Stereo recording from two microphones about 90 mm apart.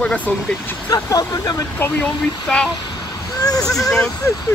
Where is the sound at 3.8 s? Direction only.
5° left (ahead or behind).